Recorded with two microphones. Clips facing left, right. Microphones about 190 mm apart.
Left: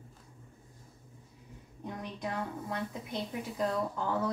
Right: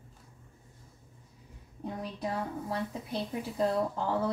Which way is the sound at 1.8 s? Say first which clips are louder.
Right 3 dB; 35° right (ahead or behind).